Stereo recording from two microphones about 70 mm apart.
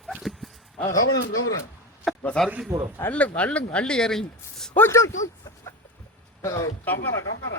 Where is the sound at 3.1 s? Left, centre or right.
Centre.